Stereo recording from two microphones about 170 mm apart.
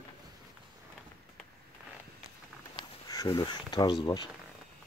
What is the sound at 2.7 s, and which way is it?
Speech, 25° left (ahead or behind).